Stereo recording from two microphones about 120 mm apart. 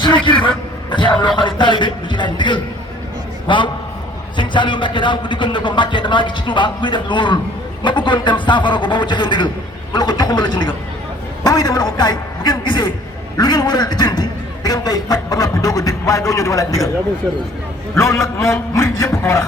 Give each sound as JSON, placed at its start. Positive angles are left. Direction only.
{"t": 0.0, "sound": "a man's voice", "side_deg": 40}
{"t": 17.9, "sound": "a man's voice", "side_deg": 25}